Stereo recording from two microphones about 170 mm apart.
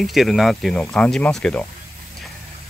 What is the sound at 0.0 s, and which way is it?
Speech, centre (ahead or behind).